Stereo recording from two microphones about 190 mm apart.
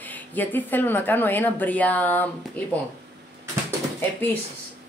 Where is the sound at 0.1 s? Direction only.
10° left (ahead or behind).